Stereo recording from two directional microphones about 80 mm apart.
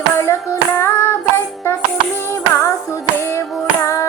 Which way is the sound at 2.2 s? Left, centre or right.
Left.